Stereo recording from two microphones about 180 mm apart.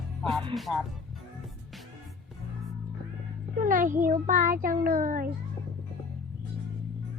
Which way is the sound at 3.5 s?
50° right (ahead or behind).